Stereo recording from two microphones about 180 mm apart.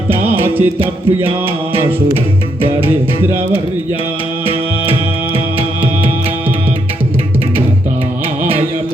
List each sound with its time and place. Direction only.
0.1 s music: 10° right (ahead or behind)
0.8 s mantra: 30° right (ahead or behind)
2.8 s speech: 10° right (ahead or behind)